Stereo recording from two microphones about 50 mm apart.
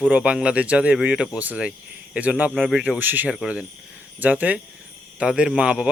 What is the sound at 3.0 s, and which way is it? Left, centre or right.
Speech, right.